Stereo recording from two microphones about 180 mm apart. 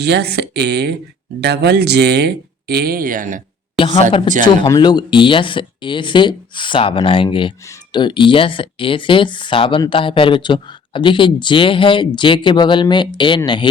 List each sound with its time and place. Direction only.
0.0 s speech: 65° right (ahead or behind); by 3.4 s 45° right (ahead or behind)
3.8 s speech: 30° left (ahead or behind)